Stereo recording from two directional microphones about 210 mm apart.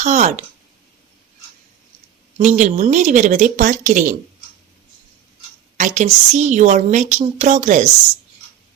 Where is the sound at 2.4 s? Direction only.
35° right (ahead or behind).